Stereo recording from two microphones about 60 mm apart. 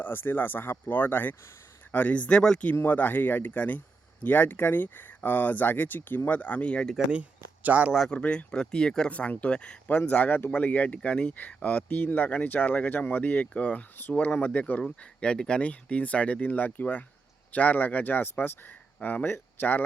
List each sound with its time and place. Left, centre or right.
0.0 s speech: left
7.1 s speech: right
8.1 s speech: centre
9.0 s speech: left